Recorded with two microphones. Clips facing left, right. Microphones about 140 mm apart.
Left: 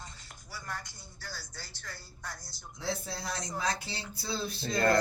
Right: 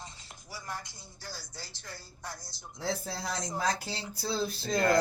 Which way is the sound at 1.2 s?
25° right (ahead or behind).